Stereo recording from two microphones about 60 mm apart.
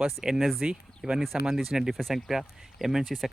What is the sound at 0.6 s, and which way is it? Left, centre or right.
Speech, centre.